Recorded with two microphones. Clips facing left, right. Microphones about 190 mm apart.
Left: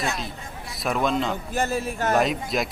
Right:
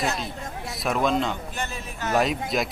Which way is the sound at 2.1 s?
Centre (ahead or behind).